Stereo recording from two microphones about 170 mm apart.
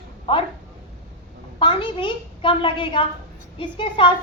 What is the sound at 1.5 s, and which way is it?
A woman's voice, 30° left (ahead or behind).